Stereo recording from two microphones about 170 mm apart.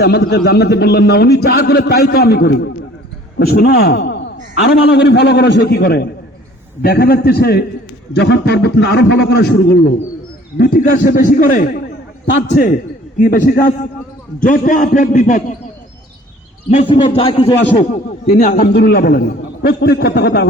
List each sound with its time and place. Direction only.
0.0 s a man's voice: 70° left (ahead or behind)
8.1 s a man's voice: 85° left
10.6 s a man's voice: 55° left (ahead or behind)
16.6 s a man's voice: 30° left (ahead or behind)
18.3 s a man's voice: 50° left (ahead or behind)
18.6 s a man's voice: 70° left (ahead or behind)